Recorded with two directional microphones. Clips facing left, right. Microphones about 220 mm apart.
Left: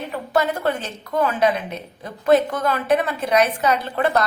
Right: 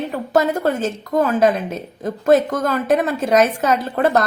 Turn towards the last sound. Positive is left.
turn(degrees=-45)  # may be behind; listen again after turning